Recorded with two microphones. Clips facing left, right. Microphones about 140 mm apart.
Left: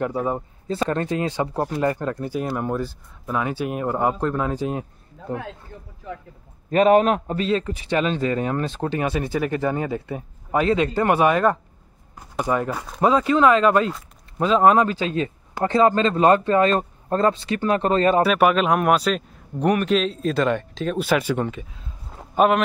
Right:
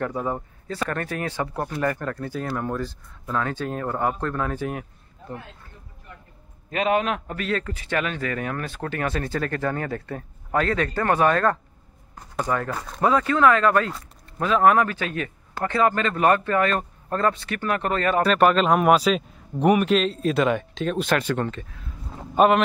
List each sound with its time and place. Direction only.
0.0 s speech: 15° left (ahead or behind)
6.0 s a sound: 90° left
6.7 s a man's voice: 40° left (ahead or behind)
7.2 s speech: 25° left (ahead or behind); by 13.0 s 5° left (ahead or behind)
13.0 s speech: 20° left (ahead or behind)
18.2 s a man's voice: 5° left (ahead or behind)
22.1 s a sound: centre (ahead or behind)